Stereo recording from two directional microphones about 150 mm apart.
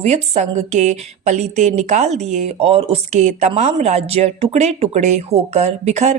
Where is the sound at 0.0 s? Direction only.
45° right (ahead or behind).